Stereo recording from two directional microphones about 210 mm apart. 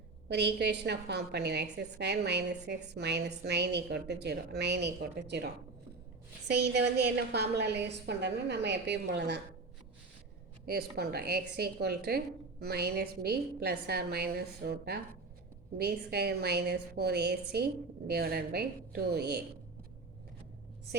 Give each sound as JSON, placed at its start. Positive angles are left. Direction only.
{"t": 0.3, "sound": "a woman's voice", "side_deg": -55}
{"t": 6.5, "sound": "a woman's voice", "side_deg": -50}
{"t": 10.7, "sound": "a woman's voice", "side_deg": -50}